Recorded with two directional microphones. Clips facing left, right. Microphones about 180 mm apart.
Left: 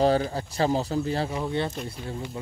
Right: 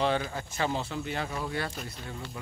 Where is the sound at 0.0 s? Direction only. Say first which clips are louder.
Left 6 dB; 35° left (ahead or behind).